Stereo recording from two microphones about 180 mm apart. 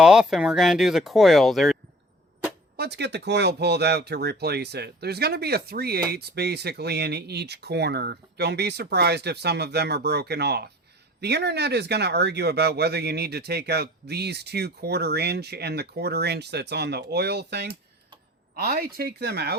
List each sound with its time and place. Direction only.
0.0 s speech: 5° right (ahead or behind)
2.7 s speech: 65° right (ahead or behind)